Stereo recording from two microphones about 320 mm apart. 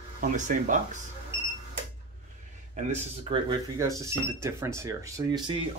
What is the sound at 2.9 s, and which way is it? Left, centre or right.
Speech, centre.